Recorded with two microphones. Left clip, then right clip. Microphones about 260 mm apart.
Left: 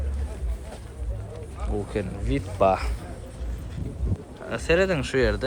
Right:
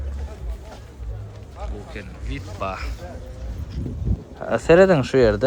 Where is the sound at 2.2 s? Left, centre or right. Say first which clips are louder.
Left 8 dB; centre.